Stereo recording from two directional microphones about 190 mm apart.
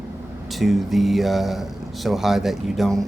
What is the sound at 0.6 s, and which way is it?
Speech, centre (ahead or behind).